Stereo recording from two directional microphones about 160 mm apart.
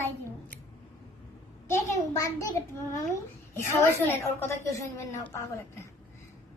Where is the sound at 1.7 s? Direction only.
20° left (ahead or behind).